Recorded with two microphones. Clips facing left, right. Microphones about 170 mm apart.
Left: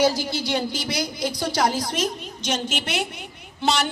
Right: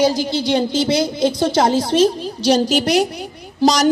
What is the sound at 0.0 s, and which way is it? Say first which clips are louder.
A woman's voice: right 5 dB; 20° right (ahead or behind).